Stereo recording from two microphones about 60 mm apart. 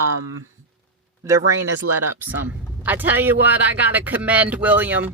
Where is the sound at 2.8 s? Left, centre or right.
Right.